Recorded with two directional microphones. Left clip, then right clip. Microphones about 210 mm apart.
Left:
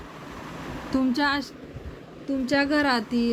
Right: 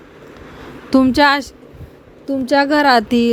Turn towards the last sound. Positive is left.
turn(degrees=-40)  # may be behind; listen again after turning